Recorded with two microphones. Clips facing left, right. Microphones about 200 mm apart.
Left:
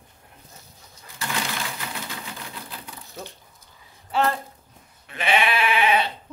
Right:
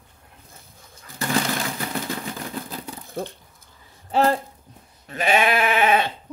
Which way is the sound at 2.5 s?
45° right (ahead or behind).